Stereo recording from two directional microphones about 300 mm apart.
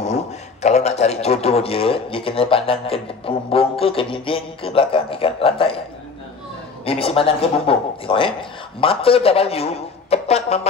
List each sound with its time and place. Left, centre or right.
0.0 s a man's voice: left
6.8 s a man's voice: centre